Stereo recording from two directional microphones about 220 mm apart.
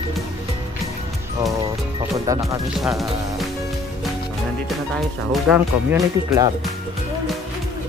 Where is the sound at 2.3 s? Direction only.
15° right (ahead or behind).